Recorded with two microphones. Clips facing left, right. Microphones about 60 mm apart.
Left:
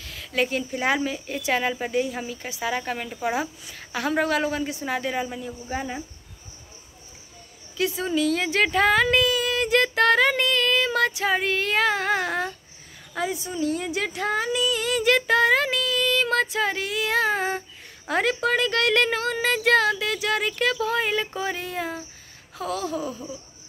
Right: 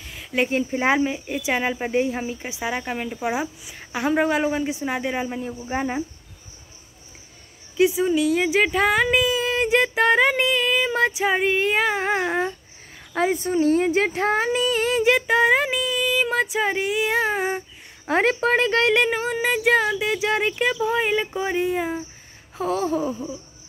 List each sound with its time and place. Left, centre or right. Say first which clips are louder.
0.0 s a sound: right 2 dB; centre
0.5 s speech: right 4 dB; right
5.4 s speech: right 4 dB; right
7.9 s speech: right 4 dB; centre
13.1 s speech: right 7 dB; right
15.0 s speech: even; centre
18.0 s speech: right 3 dB; right
18.9 s speech: right 1 dB; centre
22.6 s speech: right 5 dB; right